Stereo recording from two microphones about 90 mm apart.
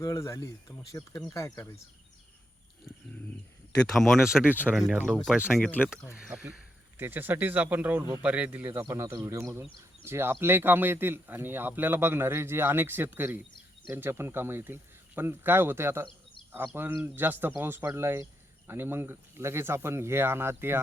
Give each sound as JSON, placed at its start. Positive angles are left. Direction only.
{"t": 0.0, "sound": "speech", "side_deg": 35}
{"t": 3.7, "sound": "speech", "side_deg": 5}
{"t": 4.4, "sound": "speech", "side_deg": -20}
{"t": 4.7, "sound": "speech", "side_deg": -5}
{"t": 5.7, "sound": "speech", "side_deg": -10}
{"t": 6.9, "sound": "speech", "side_deg": -20}